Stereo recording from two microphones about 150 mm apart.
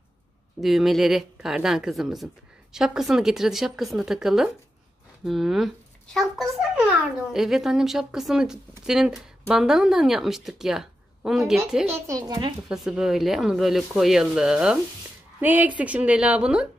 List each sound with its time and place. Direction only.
0.6 s speech: centre (ahead or behind)
11.9 s speech: 20° right (ahead or behind)
12.6 s a woman's voice: 5° right (ahead or behind)